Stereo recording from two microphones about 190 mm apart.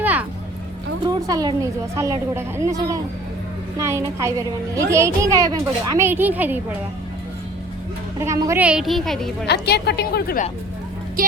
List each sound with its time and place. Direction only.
0.0 s a sound: 10° right (ahead or behind)
1.0 s a woman's voice: 20° right (ahead or behind)
8.2 s a woman's voice: 15° right (ahead or behind); by 9.5 s centre (ahead or behind)
9.5 s a woman's voice: 60° left (ahead or behind)
11.2 s speech: 50° right (ahead or behind)